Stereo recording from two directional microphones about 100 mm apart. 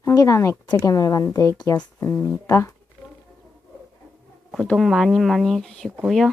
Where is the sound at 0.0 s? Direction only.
30° left (ahead or behind).